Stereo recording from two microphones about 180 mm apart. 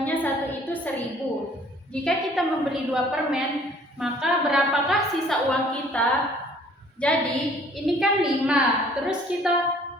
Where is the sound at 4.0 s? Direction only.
5° right (ahead or behind).